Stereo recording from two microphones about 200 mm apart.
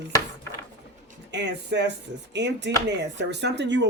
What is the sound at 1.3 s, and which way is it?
Speech, 60° right (ahead or behind).